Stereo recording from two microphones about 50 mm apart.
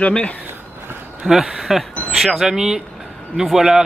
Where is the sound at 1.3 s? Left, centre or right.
Centre.